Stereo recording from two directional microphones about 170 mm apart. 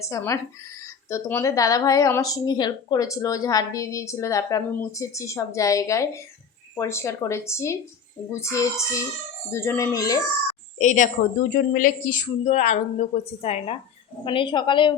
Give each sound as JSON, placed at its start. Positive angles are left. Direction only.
{"t": 0.0, "sound": "a woman's voice", "side_deg": 15}
{"t": 10.8, "sound": "a woman's voice", "side_deg": 45}